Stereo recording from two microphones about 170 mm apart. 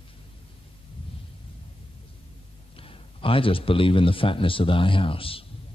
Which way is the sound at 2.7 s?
30° left (ahead or behind).